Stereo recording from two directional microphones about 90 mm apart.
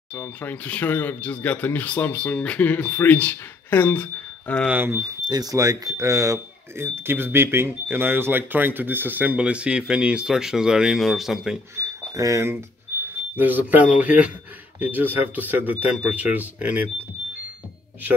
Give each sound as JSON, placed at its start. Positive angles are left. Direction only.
{"t": 0.4, "sound": "speech", "side_deg": 20}
{"t": 4.6, "sound": "speech", "side_deg": -25}
{"t": 5.3, "sound": "speech", "side_deg": -40}
{"t": 11.7, "sound": "speech", "side_deg": -35}
{"t": 13.4, "sound": "speech", "side_deg": -20}